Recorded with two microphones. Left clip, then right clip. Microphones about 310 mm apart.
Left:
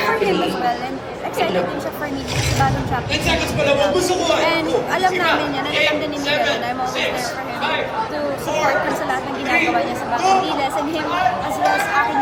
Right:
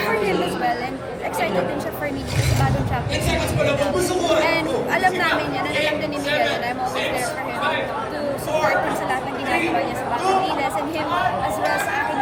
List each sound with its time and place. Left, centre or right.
3.2 s speech: centre
4.5 s speech: centre
5.7 s speech: left
10.2 s speech: centre